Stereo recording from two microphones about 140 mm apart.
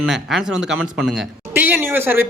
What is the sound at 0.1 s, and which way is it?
Speech, centre (ahead or behind).